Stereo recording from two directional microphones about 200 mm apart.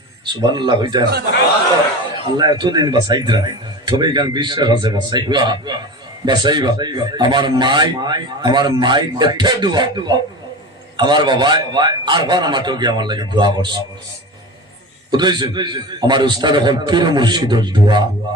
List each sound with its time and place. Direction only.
0.3 s speech: 20° right (ahead or behind)
2.4 s speech: 20° right (ahead or behind)
15.1 s speech: 20° right (ahead or behind)